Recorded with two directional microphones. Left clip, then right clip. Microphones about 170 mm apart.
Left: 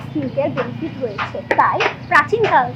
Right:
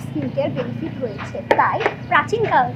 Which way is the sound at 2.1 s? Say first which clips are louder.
Left 4 dB; 35° right (ahead or behind).